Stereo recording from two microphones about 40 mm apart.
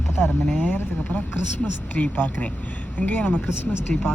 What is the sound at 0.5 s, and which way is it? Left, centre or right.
A woman's voice, left.